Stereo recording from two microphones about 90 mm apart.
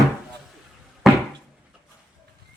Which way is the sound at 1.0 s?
5° right (ahead or behind).